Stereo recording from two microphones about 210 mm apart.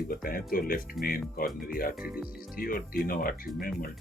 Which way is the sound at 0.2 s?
45° left (ahead or behind).